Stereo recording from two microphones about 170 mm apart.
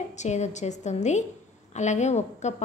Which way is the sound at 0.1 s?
45° left (ahead or behind).